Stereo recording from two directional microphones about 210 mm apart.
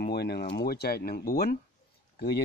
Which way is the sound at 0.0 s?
50° left (ahead or behind).